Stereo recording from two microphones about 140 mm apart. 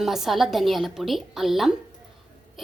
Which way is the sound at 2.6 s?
Centre (ahead or behind).